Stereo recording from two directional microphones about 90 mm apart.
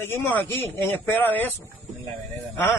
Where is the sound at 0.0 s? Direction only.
25° left (ahead or behind).